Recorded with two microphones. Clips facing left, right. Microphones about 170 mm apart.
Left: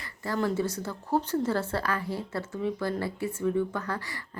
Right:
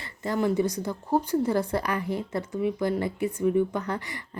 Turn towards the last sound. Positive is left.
turn(degrees=-20)  # may be behind; listen again after turning